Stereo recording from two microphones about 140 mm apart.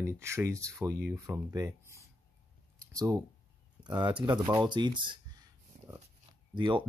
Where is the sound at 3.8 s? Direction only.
30° right (ahead or behind).